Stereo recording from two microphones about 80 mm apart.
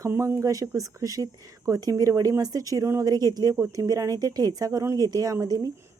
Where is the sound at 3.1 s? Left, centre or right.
Right.